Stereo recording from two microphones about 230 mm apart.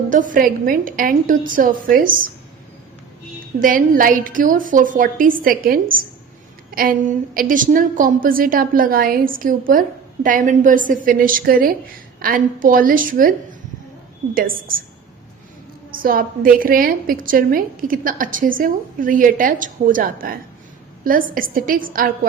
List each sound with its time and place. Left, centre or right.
0.1 s a woman's voice: right
3.6 s a woman's voice: right
15.9 s a woman's voice: right